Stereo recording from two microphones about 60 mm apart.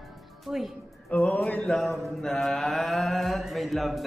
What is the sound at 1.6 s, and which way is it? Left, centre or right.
Mantra, centre.